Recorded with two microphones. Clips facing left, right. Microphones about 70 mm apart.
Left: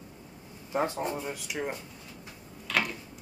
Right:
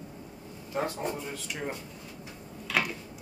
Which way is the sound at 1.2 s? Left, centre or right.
Centre.